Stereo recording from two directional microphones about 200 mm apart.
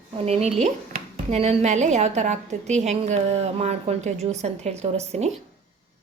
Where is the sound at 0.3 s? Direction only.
30° right (ahead or behind).